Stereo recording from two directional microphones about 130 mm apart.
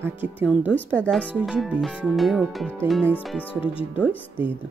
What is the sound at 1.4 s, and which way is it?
Speech, centre (ahead or behind).